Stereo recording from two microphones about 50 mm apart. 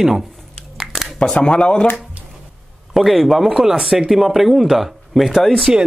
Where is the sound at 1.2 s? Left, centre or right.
Centre.